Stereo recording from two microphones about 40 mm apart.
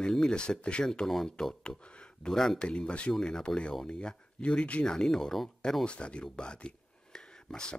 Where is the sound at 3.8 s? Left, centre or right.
Left.